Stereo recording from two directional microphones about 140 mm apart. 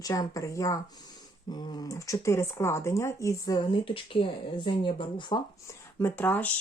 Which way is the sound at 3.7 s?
40° left (ahead or behind).